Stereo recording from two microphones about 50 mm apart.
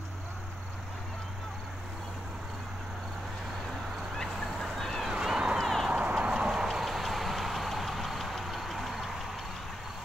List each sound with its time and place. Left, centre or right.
4.2 s fowl: centre
5.0 s a sound: centre
5.6 s clip-clop: centre
5.9 s vehicle: right; by 9.1 s centre